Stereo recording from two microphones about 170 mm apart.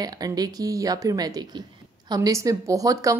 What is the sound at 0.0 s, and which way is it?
A woman's voice, 20° right (ahead or behind).